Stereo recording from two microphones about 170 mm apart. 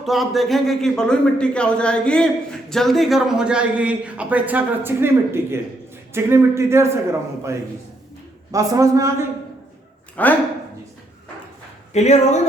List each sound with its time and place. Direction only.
0.0 s a man's voice: centre (ahead or behind); by 9.2 s 20° right (ahead or behind)
10.2 s speech: 10° left (ahead or behind)
11.9 s speech: 40° left (ahead or behind)